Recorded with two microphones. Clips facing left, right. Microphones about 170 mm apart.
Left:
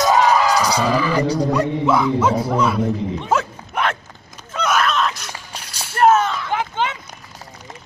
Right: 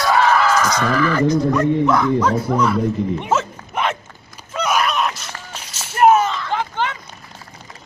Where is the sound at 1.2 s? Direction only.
35° left (ahead or behind).